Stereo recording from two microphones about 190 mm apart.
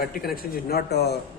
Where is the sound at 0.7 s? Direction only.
60° left (ahead or behind).